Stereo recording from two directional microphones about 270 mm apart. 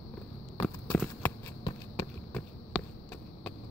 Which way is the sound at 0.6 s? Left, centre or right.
Centre.